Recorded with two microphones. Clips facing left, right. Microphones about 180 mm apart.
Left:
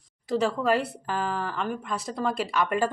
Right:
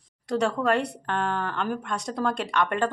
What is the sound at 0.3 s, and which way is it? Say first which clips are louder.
Speech: even; centre (ahead or behind).